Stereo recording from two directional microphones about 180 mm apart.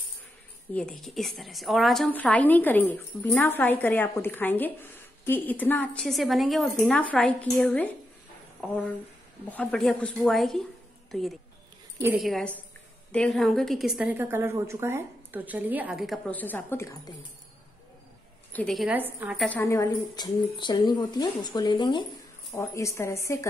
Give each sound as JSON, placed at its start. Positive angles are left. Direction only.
{"t": 0.7, "sound": "a woman's voice", "side_deg": 5}
{"t": 18.5, "sound": "a woman's voice", "side_deg": 5}
{"t": 18.9, "sound": "a woman's voice", "side_deg": -10}
{"t": 19.4, "sound": "a woman's voice", "side_deg": 10}